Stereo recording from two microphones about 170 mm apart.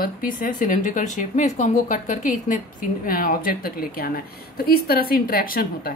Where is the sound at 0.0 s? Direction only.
55° left (ahead or behind).